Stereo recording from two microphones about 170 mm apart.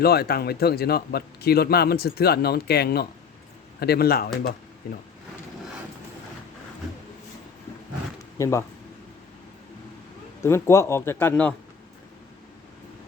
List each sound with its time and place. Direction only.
0.0 s a man's voice: 65° left (ahead or behind)
8.4 s speech: 15° left (ahead or behind)
10.4 s speech: 15° left (ahead or behind)